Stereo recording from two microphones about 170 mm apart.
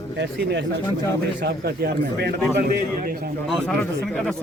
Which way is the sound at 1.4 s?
75° right (ahead or behind).